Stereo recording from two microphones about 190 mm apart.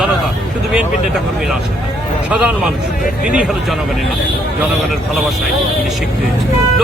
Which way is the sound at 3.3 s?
5° right (ahead or behind).